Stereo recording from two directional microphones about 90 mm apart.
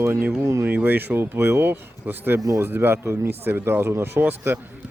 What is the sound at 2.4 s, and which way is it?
Speech, 40° right (ahead or behind).